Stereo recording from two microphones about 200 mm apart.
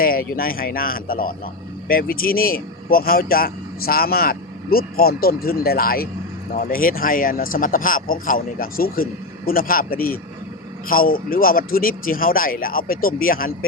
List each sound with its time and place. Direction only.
0.0 s a man's voice: 45° left (ahead or behind)